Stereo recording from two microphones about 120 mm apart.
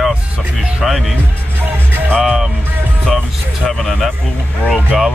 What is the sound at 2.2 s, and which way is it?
Speech, 5° right (ahead or behind).